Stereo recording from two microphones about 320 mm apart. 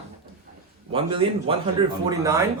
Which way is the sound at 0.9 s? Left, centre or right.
Centre.